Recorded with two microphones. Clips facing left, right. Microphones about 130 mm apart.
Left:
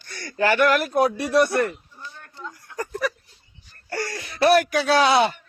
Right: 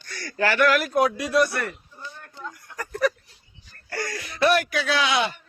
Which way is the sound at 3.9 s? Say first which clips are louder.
Left 2 dB; 30° left (ahead or behind).